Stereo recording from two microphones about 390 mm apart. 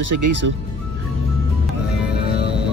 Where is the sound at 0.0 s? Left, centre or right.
Right.